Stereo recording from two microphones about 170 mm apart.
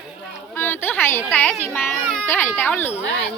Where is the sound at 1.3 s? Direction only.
10° left (ahead or behind).